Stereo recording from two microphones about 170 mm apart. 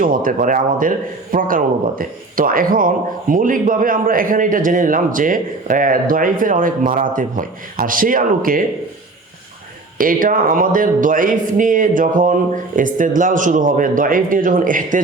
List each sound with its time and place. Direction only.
0.0 s a man's voice: 55° right (ahead or behind)
10.0 s a man's voice: 55° right (ahead or behind)